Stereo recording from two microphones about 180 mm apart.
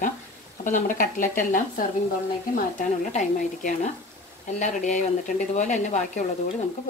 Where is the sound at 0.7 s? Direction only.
45° left (ahead or behind).